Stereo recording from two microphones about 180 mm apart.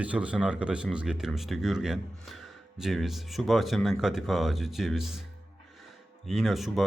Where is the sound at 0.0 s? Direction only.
5° right (ahead or behind).